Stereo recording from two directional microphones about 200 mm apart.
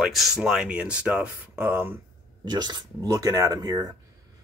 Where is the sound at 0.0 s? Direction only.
Centre (ahead or behind).